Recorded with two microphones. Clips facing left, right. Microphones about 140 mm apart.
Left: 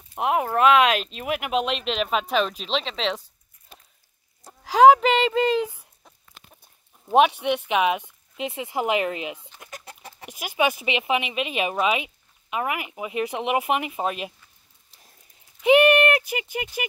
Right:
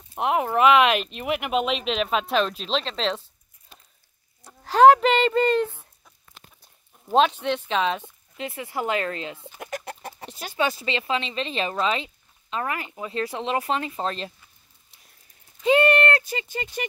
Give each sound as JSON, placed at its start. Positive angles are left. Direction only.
{"t": 0.1, "sound": "speech", "side_deg": 0}
{"t": 4.6, "sound": "speech", "side_deg": 5}
{"t": 7.1, "sound": "speech", "side_deg": 15}
{"t": 9.6, "sound": "chicken", "side_deg": -65}
{"t": 10.3, "sound": "speech", "side_deg": 15}
{"t": 15.6, "sound": "clip-clop", "side_deg": 15}